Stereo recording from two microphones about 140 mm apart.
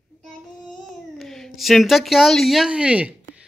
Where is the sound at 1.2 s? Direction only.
Centre (ahead or behind).